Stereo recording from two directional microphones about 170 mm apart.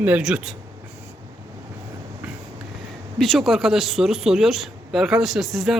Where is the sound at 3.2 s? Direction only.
Centre (ahead or behind).